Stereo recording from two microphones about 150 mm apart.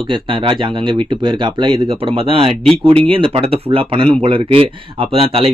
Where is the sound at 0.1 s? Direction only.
35° right (ahead or behind).